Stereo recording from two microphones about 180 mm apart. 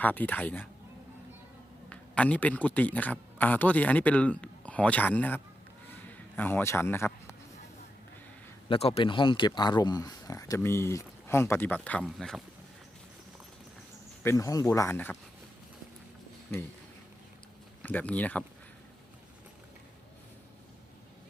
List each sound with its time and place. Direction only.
0.0 s speech: 10° left (ahead or behind)
1.9 s a man's voice: 5° left (ahead or behind)
5.9 s a sound: 10° left (ahead or behind)
8.7 s speech: 35° left (ahead or behind); by 12.4 s centre (ahead or behind)
14.3 s speech: 20° left (ahead or behind)
17.8 s speech: 10° left (ahead or behind)